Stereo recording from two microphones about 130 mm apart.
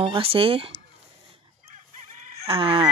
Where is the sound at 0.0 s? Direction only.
45° right (ahead or behind).